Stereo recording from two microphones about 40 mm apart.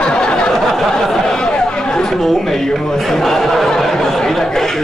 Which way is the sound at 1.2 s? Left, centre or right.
Left.